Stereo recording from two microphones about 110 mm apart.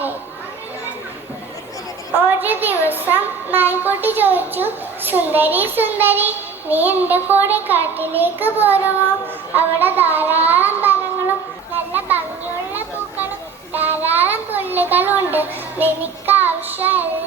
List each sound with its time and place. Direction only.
2.4 s a woman's voice: 15° right (ahead or behind)
11.9 s a sound: 15° right (ahead or behind)
13.7 s child singing: 15° right (ahead or behind)